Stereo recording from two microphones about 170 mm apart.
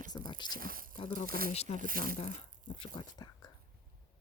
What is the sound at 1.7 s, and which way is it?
Speech, 55° right (ahead or behind).